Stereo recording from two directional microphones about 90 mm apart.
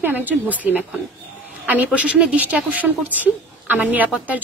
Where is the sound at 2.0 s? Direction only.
15° right (ahead or behind).